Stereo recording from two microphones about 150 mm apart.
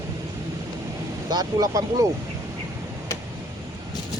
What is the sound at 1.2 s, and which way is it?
Speech, 25° right (ahead or behind).